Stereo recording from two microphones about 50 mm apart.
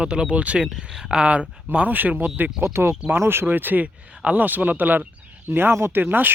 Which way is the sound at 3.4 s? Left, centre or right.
Right.